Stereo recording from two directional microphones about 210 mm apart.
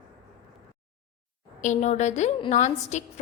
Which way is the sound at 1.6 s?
35° left (ahead or behind).